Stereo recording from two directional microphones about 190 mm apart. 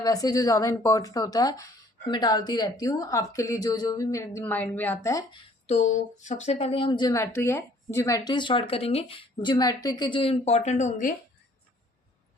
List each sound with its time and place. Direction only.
0.0 s speech: 20° left (ahead or behind)
5.6 s speech: 40° left (ahead or behind)